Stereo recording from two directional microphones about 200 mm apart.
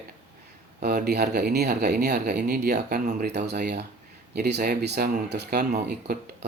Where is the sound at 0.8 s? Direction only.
50° right (ahead or behind).